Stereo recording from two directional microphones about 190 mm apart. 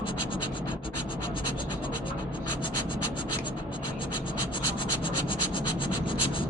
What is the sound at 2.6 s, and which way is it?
Scratch, 25° left (ahead or behind).